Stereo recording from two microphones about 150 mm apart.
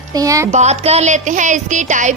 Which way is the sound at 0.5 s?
50° right (ahead or behind).